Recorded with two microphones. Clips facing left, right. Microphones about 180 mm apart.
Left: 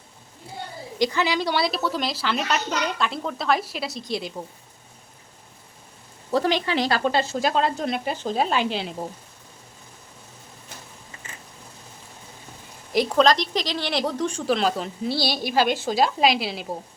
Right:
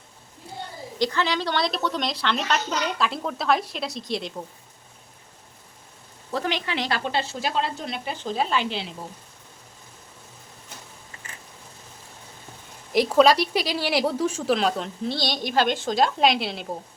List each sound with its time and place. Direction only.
0.9 s speech: 10° left (ahead or behind)
6.3 s speech: 35° left (ahead or behind)
12.9 s speech: centre (ahead or behind)